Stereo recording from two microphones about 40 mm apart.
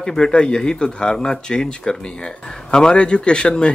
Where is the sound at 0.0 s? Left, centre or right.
Centre.